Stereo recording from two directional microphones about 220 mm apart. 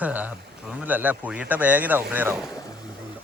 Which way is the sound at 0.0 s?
5° right (ahead or behind).